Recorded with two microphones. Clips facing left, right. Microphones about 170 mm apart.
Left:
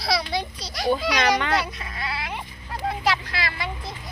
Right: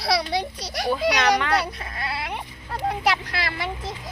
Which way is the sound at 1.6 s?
45° right (ahead or behind).